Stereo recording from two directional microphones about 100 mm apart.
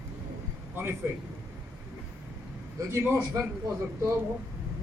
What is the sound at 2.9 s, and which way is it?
Speech, 25° right (ahead or behind).